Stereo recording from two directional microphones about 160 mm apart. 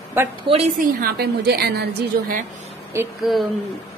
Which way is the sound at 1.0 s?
85° right.